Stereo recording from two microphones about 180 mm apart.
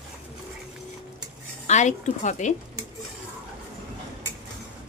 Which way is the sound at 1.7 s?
40° left (ahead or behind).